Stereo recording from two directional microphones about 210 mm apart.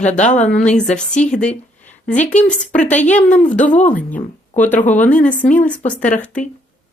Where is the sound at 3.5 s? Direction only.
5° left (ahead or behind).